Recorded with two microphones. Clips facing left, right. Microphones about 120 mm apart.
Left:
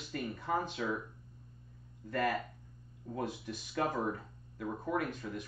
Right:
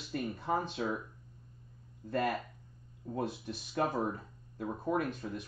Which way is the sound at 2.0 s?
25° right (ahead or behind).